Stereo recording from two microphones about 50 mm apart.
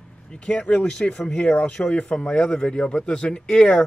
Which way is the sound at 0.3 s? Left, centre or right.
Left.